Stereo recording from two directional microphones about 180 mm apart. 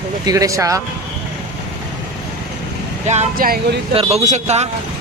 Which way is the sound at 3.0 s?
40° right (ahead or behind).